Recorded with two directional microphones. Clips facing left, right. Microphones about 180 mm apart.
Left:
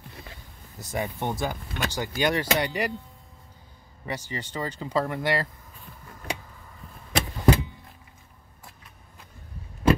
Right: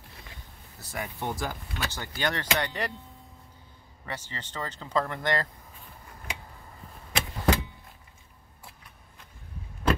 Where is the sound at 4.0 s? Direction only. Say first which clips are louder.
Left 5 dB; 15° left (ahead or behind).